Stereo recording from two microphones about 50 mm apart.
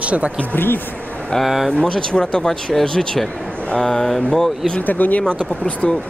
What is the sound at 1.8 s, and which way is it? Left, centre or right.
Speech, centre.